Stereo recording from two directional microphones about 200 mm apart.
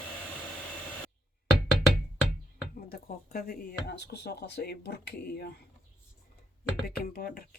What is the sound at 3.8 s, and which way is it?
Speech, 55° left (ahead or behind).